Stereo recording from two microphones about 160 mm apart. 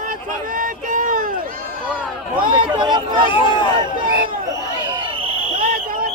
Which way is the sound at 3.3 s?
30° left (ahead or behind).